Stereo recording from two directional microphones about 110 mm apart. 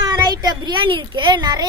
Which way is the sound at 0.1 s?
35° right (ahead or behind).